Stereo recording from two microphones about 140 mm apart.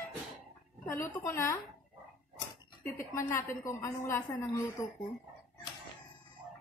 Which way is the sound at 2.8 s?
20° left (ahead or behind).